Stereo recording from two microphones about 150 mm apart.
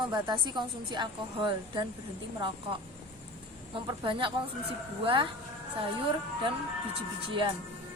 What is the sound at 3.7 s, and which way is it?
A woman's voice, 35° right (ahead or behind).